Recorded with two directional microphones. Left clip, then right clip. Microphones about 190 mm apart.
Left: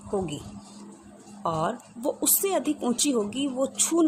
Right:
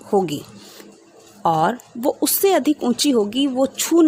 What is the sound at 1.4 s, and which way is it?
Speech, 40° right (ahead or behind).